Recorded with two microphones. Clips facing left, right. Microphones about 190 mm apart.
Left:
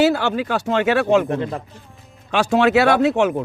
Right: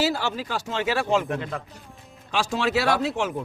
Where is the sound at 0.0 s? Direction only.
60° left (ahead or behind).